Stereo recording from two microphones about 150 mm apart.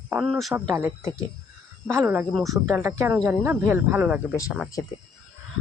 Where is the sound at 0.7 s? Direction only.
20° right (ahead or behind).